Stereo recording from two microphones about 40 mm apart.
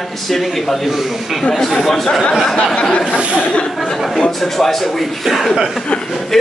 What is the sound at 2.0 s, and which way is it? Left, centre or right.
Speech, centre.